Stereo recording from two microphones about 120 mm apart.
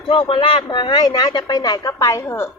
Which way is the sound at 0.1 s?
50° left (ahead or behind).